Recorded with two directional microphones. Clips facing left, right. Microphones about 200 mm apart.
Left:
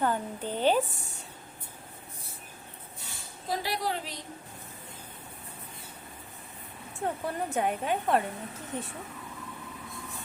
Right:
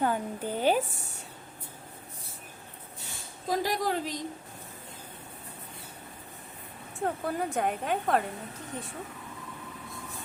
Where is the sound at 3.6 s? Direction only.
45° right (ahead or behind).